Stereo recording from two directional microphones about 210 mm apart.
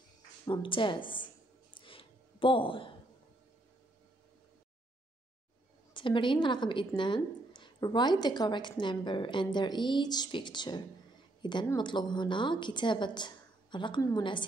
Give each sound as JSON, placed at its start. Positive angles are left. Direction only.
{"t": 0.5, "sound": "speech", "side_deg": 25}
{"t": 1.8, "sound": "a sound", "side_deg": 25}
{"t": 5.9, "sound": "speech", "side_deg": 25}